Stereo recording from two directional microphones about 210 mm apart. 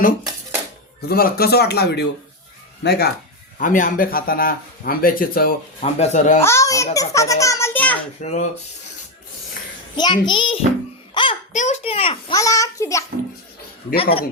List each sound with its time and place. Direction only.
1.0 s speech: 45° left (ahead or behind)
3.6 s speech: 40° left (ahead or behind)
5.8 s speech: 35° left (ahead or behind)
6.4 s a child's voice: 15° left (ahead or behind)
8.2 s speech: 35° left (ahead or behind)
10.0 s a child's voice: 20° left (ahead or behind)
11.1 s a sound: 25° left (ahead or behind)
11.5 s a child's voice: 35° left (ahead or behind)
12.4 s a child's voice: 15° left (ahead or behind)
13.9 s a child's voice: 25° left (ahead or behind)